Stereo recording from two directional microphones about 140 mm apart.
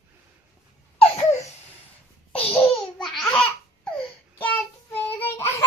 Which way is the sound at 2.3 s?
40° left (ahead or behind).